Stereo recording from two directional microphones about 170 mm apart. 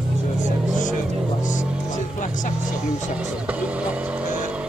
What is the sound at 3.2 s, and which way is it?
Vehicle, 10° right (ahead or behind).